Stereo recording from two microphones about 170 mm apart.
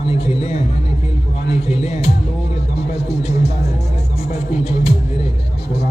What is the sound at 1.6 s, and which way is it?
Speech, 40° left (ahead or behind).